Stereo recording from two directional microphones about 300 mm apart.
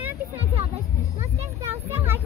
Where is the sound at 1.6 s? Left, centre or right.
Centre.